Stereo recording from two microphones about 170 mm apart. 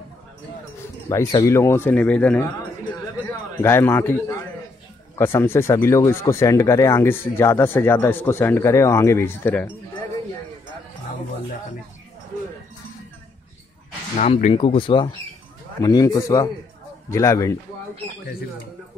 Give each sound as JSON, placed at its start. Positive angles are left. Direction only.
{"t": 1.0, "sound": "speech", "side_deg": 15}
{"t": 3.3, "sound": "a sound", "side_deg": 15}
{"t": 5.1, "sound": "speech", "side_deg": 15}
{"t": 14.1, "sound": "speech", "side_deg": 40}